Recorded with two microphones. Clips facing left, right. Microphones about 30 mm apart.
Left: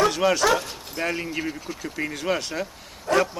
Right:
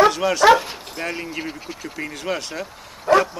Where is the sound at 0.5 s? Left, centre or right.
Right.